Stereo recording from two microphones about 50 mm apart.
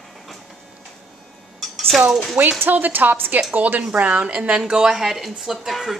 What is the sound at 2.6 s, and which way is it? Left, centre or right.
A woman's voice, right.